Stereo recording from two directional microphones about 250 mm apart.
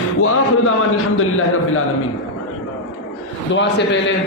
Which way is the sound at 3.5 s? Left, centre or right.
Left.